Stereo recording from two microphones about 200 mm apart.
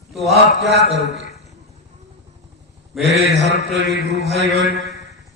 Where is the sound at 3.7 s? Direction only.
60° right (ahead or behind).